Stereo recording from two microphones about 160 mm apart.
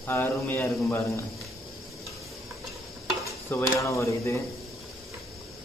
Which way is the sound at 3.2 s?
20° left (ahead or behind).